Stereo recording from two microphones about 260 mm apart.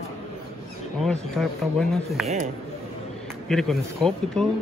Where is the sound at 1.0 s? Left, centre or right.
Centre.